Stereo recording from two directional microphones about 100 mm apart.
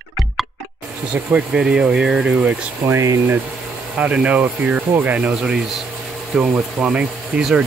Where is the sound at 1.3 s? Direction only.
10° right (ahead or behind).